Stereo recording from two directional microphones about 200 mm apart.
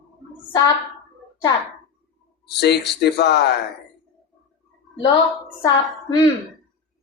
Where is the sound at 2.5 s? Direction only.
55° left (ahead or behind).